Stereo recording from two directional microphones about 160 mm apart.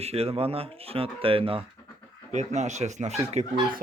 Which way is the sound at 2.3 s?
45° right (ahead or behind).